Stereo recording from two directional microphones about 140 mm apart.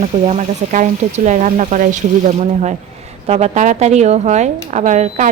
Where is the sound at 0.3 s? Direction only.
60° right (ahead or behind).